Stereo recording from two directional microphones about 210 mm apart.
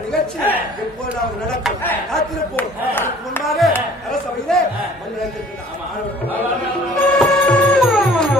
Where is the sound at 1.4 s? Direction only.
Centre (ahead or behind).